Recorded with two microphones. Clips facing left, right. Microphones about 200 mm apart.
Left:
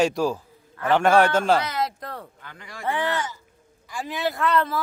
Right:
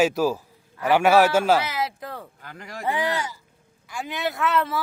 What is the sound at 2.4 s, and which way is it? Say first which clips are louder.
Speech: right 4 dB; 40° right (ahead or behind).